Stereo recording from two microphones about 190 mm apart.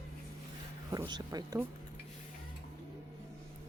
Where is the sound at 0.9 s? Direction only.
20° right (ahead or behind).